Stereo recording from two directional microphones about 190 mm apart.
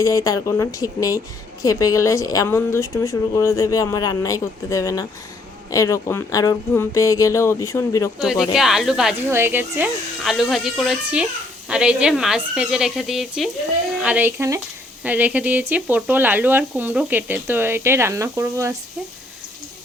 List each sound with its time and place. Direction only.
0.0 s a woman's voice: 15° left (ahead or behind)
8.2 s speech: centre (ahead or behind)